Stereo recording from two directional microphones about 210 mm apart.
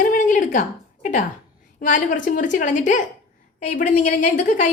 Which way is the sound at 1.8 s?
40° left (ahead or behind).